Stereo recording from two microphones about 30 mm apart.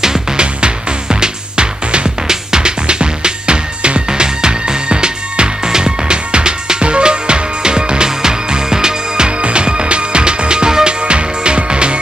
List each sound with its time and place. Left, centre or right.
0.4 s music: right
2.2 s music: right
2.9 s music: right
9.4 s music: right